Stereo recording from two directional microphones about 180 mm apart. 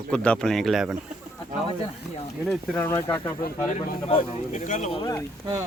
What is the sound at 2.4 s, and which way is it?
Speech, centre (ahead or behind).